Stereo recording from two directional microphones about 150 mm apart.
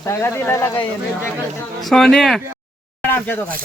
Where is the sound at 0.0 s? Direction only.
20° left (ahead or behind).